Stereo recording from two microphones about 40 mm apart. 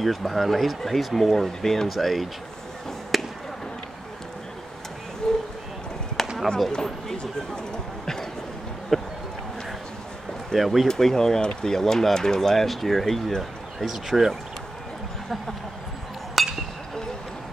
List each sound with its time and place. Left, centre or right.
0.0 s speech: centre
3.1 s chop: centre
5.2 s a sound: centre
6.2 s basketball bounce: centre
6.7 s speech: centre
10.5 s speech: centre
10.9 s speech: centre
16.4 s chink: centre